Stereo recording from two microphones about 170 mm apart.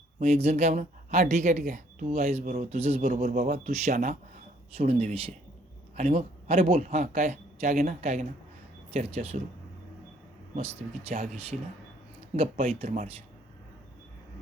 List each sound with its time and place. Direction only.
0.2 s speech: 40° right (ahead or behind)
3.0 s speech: 55° right (ahead or behind)
4.8 s speech: 40° right (ahead or behind)
11.1 s speech: 45° right (ahead or behind)
12.6 s speech: 40° right (ahead or behind)